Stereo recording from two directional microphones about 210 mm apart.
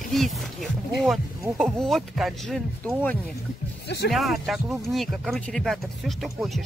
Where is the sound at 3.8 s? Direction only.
50° left (ahead or behind).